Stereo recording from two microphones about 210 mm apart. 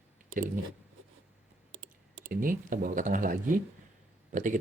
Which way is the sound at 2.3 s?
40° right (ahead or behind).